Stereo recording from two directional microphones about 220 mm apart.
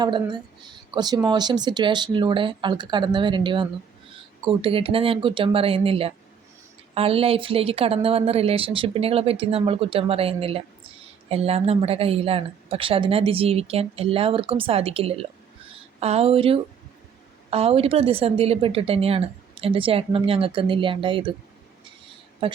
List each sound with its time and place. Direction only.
0.0 s a woman's voice: 20° right (ahead or behind)
22.4 s a woman's voice: 25° right (ahead or behind)